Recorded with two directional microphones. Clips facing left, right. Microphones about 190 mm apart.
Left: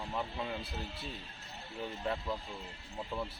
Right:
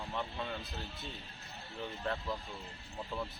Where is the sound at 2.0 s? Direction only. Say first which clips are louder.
Left 1 dB; 10° left (ahead or behind).